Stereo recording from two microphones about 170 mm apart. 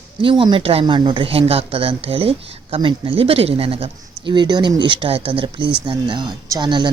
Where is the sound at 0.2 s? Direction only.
30° right (ahead or behind).